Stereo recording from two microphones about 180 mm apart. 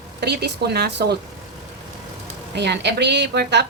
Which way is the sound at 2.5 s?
70° right (ahead or behind).